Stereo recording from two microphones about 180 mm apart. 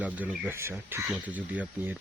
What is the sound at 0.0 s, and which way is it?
Speech, 10° right (ahead or behind).